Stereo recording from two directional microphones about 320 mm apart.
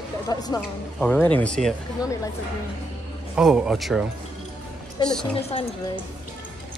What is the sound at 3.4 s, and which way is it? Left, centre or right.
Speech, centre.